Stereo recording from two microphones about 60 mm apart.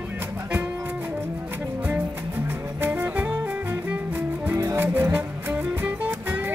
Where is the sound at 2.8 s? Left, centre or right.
Right.